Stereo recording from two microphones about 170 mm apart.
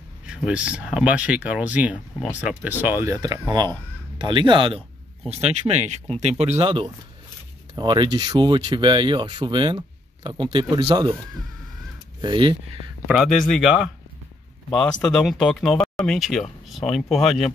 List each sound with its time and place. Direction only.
0.3 s speech: 5° right (ahead or behind); by 6.5 s 40° right (ahead or behind)
6.6 s speech: 25° right (ahead or behind)
12.2 s speech: 30° right (ahead or behind)
13.0 s speech: centre (ahead or behind)